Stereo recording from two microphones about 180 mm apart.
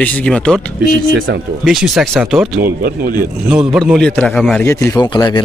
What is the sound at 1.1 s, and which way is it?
Speech, 55° right (ahead or behind).